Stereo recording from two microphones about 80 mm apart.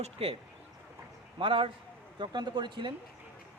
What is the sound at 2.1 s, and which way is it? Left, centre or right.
Speech, right.